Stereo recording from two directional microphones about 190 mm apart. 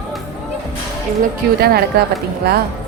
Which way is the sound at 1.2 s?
55° right (ahead or behind).